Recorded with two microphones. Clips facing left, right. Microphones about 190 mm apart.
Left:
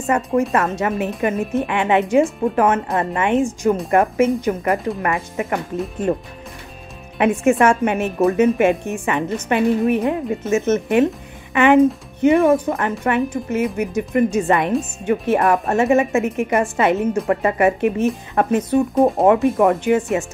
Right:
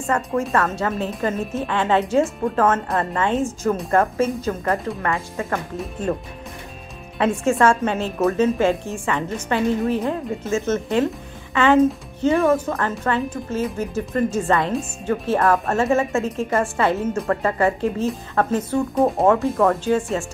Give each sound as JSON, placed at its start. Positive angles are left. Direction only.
{"t": 0.1, "sound": "a woman's voice", "side_deg": 20}
{"t": 7.2, "sound": "a woman's voice", "side_deg": 20}
{"t": 18.9, "sound": "speech", "side_deg": 0}
{"t": 19.2, "sound": "a woman's voice", "side_deg": 20}